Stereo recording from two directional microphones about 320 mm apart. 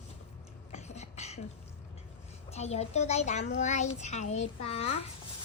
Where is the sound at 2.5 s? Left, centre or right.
Centre.